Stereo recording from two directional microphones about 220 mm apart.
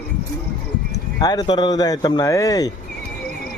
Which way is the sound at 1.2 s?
15° left (ahead or behind).